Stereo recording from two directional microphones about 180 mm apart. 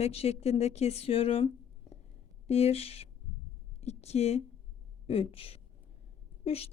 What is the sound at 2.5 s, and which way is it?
A woman's voice, 35° left (ahead or behind).